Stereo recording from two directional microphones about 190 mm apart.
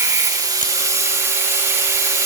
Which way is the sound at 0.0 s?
15° right (ahead or behind).